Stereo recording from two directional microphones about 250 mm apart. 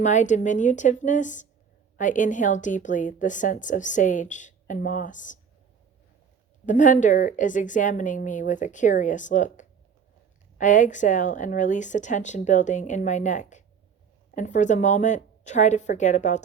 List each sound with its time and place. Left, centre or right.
0.0 s a woman's voice: left
6.7 s a woman's voice: left